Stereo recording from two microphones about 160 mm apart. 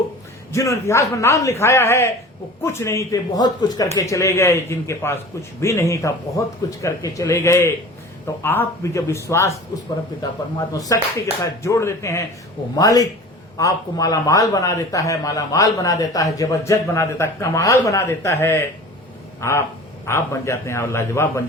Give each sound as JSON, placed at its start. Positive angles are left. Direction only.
{"t": 0.5, "sound": "a man's voice", "side_deg": 20}
{"t": 10.7, "sound": "a man's voice", "side_deg": 20}